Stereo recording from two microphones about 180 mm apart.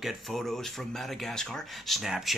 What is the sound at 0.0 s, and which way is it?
Speech, centre (ahead or behind).